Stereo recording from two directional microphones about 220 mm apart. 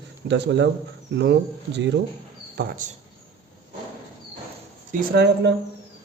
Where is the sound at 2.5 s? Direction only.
40° right (ahead or behind).